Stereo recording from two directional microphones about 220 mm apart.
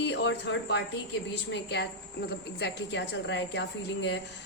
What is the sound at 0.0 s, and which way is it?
A woman's voice, 55° left (ahead or behind).